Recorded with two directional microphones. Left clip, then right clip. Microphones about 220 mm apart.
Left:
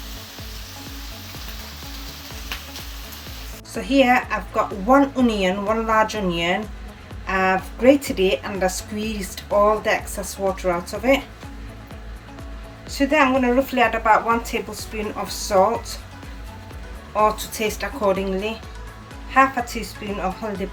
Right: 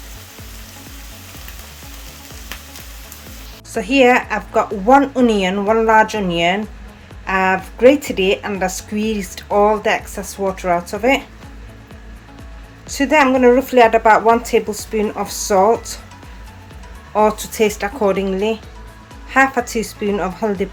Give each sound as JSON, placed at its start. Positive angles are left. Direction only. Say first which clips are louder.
{"t": 3.8, "sound": "a woman's voice", "louder": "right 5 dB", "side_deg": -15}
{"t": 12.9, "sound": "a woman's voice", "louder": "right 4 dB", "side_deg": -20}
{"t": 17.2, "sound": "a woman's voice", "louder": "right 5 dB", "side_deg": -20}